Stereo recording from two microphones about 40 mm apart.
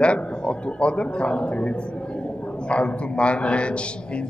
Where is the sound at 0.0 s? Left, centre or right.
Left.